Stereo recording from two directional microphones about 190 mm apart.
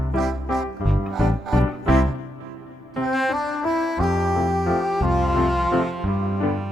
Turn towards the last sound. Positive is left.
turn(degrees=0)  # may be behind; listen again after turning